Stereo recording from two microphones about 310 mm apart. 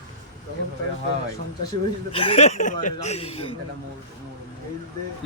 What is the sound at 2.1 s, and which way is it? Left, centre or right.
Speech, centre.